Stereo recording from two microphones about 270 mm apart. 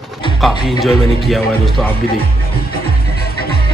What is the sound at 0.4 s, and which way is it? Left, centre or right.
Speech, centre.